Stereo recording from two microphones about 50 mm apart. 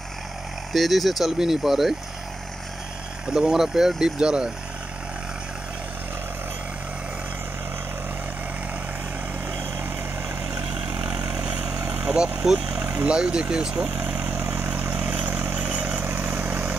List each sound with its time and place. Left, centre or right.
0.7 s speech: centre
3.3 s speech: centre
11.0 s vehicle: right
12.6 s vehicle: right
13.0 s speech: centre
14.0 s vehicle: right
14.3 s vehicle: right
14.7 s vehicle: right
16.1 s vehicle: right